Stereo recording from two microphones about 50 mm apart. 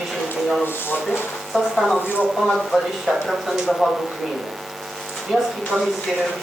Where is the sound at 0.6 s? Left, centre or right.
Left.